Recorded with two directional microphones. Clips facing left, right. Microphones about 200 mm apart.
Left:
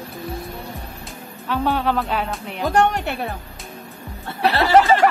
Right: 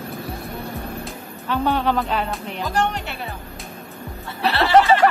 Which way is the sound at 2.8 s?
50° left (ahead or behind).